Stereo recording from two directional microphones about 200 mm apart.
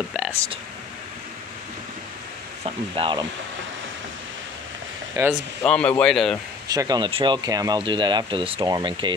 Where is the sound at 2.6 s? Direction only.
25° right (ahead or behind).